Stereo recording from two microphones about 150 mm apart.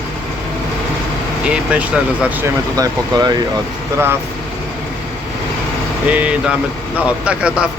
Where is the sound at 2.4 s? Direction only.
25° right (ahead or behind).